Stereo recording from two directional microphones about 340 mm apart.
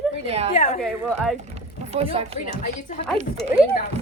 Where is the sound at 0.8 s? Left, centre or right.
Centre.